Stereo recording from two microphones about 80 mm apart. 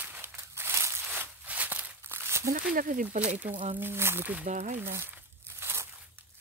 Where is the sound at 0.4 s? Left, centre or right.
Right.